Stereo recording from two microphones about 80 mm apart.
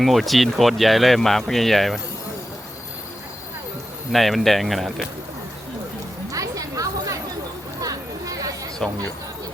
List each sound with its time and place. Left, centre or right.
0.0 s speech: centre
4.1 s speech: centre
6.3 s a sound: right